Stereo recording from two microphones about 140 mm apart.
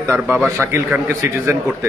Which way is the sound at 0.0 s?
15° right (ahead or behind).